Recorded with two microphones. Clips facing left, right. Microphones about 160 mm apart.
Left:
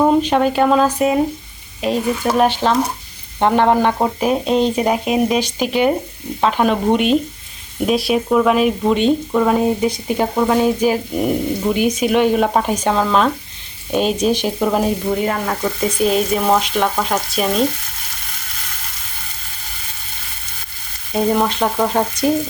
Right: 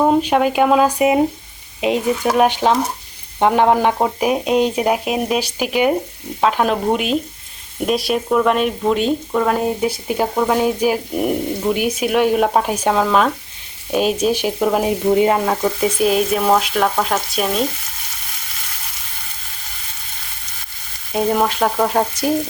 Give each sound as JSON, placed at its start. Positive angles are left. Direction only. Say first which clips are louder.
{"t": 0.0, "sound": "speech", "louder": "left 1 dB", "side_deg": -5}
{"t": 15.1, "sound": "frying", "louder": "right 5 dB", "side_deg": -20}
{"t": 15.6, "sound": "speech", "louder": "right 1 dB", "side_deg": -5}
{"t": 21.1, "sound": "speech", "louder": "left 1 dB", "side_deg": -5}